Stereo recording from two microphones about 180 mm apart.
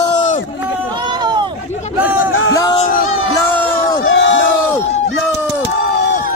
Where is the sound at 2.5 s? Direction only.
20° left (ahead or behind).